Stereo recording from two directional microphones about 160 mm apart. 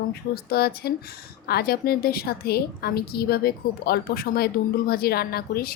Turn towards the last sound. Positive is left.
turn(degrees=70)  # may be behind; listen again after turning